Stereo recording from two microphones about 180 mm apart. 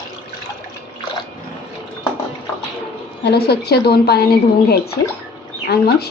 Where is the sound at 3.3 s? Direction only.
60° left (ahead or behind).